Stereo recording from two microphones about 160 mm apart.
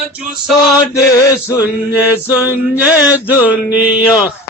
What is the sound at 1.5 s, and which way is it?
Male singing, 10° right (ahead or behind).